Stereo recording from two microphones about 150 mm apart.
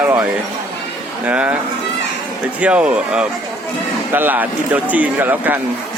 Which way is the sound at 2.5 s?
10° right (ahead or behind).